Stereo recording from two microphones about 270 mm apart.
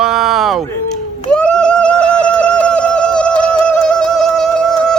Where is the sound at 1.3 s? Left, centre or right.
Centre.